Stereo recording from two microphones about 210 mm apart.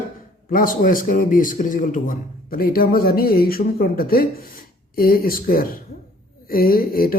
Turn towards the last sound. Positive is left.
turn(degrees=45)  # may be behind; listen again after turning